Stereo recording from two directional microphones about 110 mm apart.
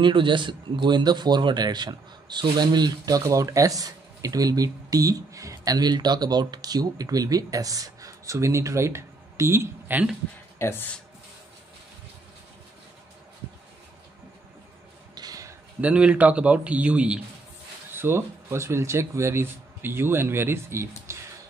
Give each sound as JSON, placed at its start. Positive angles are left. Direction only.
{"t": 0.0, "sound": "a man's voice", "side_deg": -45}
{"t": 10.6, "sound": "speech", "side_deg": 20}
{"t": 15.1, "sound": "a sound", "side_deg": -35}
{"t": 15.8, "sound": "a man's voice", "side_deg": -10}
{"t": 17.9, "sound": "speech", "side_deg": -20}